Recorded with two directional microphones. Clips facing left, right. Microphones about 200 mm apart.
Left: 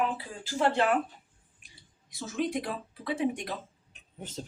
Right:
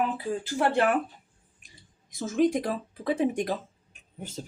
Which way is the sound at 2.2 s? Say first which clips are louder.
Right 7 dB; 45° right (ahead or behind).